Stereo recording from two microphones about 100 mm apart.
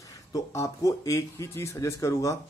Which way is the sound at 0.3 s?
35° left (ahead or behind).